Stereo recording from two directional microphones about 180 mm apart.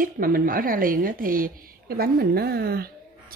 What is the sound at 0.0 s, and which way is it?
A woman's voice, 50° right (ahead or behind).